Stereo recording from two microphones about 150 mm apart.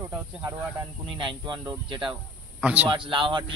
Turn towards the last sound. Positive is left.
turn(degrees=-35)  # may be behind; listen again after turning